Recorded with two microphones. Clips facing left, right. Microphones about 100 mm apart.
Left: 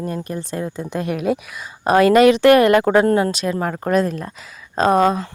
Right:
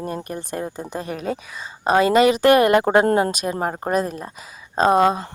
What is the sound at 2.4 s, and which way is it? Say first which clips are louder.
Speech: left 3 dB; 25° right (ahead or behind).